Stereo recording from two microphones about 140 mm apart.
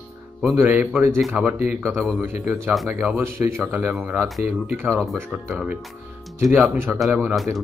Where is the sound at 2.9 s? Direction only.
15° right (ahead or behind).